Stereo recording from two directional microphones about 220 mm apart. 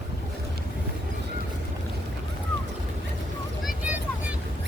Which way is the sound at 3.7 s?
5° right (ahead or behind).